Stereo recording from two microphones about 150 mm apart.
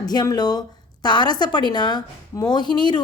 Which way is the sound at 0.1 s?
25° left (ahead or behind).